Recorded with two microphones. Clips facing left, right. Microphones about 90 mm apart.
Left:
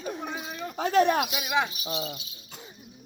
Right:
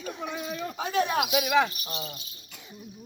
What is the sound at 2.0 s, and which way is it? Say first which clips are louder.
Speech: left 3 dB; 40° right (ahead or behind).